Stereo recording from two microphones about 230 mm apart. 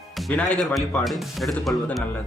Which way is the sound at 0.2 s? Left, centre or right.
Centre.